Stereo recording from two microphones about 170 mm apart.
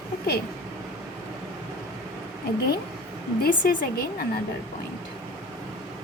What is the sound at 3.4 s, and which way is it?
Speech, 60° left (ahead or behind).